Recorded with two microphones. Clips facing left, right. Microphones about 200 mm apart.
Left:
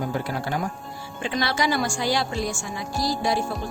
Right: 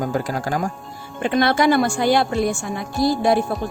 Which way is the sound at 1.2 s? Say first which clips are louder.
Right 7 dB; 55° right (ahead or behind).